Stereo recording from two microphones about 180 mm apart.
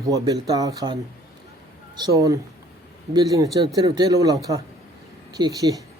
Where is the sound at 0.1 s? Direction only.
20° right (ahead or behind).